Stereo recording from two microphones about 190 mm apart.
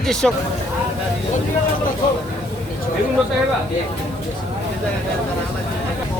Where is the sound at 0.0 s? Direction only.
5° left (ahead or behind).